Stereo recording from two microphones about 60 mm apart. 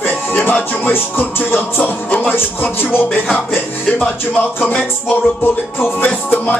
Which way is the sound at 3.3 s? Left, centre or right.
Left.